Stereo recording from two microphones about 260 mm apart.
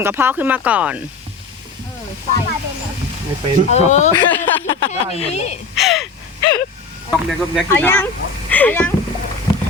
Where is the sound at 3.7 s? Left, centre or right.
Left.